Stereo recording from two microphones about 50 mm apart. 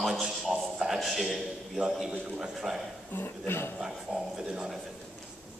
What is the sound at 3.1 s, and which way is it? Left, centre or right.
Speech, left.